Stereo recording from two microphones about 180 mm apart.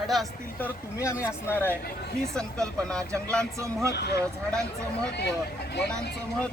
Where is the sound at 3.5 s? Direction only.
15° right (ahead or behind).